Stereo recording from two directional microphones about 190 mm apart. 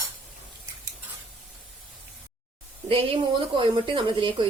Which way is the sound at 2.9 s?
30° right (ahead or behind).